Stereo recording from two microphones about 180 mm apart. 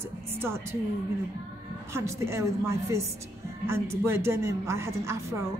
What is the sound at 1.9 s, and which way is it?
A woman's voice, 15° right (ahead or behind).